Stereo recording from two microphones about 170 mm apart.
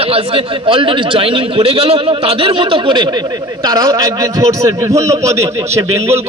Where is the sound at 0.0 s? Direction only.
35° right (ahead or behind).